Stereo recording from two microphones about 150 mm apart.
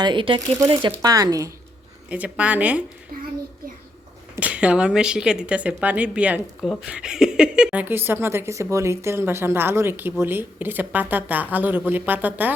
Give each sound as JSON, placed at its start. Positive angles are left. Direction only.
{"t": 0.0, "sound": "speech", "side_deg": -35}
{"t": 2.0, "sound": "a woman's voice", "side_deg": -10}
{"t": 3.1, "sound": "a child's voice", "side_deg": -75}
{"t": 4.4, "sound": "a woman's voice", "side_deg": -10}